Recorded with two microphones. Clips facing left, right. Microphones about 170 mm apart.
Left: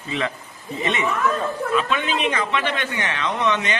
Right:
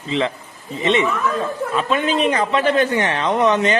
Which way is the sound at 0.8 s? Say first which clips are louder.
Right 7 dB; 25° right (ahead or behind).